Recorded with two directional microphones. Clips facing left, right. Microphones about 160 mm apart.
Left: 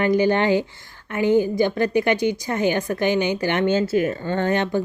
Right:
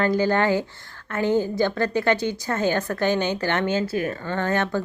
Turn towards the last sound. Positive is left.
turn(degrees=20)  # may be behind; listen again after turning